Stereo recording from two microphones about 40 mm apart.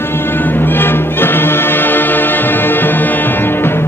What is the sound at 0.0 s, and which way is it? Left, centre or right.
Music, left.